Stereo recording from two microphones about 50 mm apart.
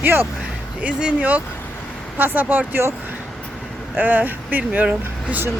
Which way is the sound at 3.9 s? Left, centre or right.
Right.